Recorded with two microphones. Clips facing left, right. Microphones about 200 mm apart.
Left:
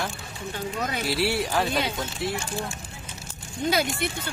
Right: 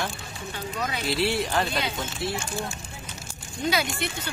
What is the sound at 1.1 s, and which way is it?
Speech, 10° left (ahead or behind).